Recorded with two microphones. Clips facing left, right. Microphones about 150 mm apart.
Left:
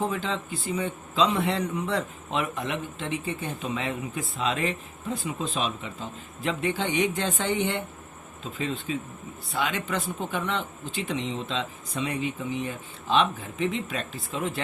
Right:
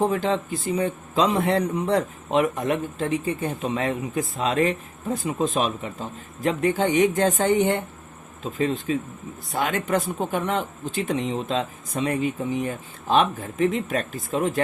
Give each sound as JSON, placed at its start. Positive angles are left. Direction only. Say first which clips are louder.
{"t": 0.0, "sound": "a man's voice", "louder": "right 7 dB", "side_deg": -40}